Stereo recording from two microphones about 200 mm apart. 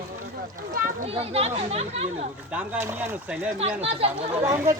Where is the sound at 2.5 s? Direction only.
10° right (ahead or behind).